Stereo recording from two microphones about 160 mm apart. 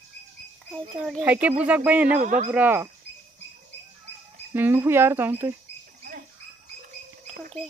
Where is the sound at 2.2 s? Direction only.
55° right (ahead or behind).